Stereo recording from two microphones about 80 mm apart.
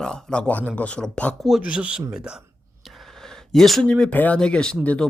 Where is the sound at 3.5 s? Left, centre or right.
Centre.